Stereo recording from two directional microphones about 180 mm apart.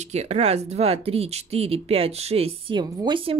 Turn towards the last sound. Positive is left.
turn(degrees=-30)  # may be behind; listen again after turning